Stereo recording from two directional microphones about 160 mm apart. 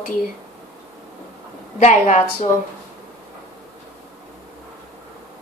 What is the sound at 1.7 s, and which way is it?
Speech, 50° left (ahead or behind).